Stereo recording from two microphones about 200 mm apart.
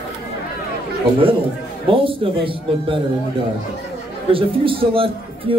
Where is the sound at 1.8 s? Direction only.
25° right (ahead or behind).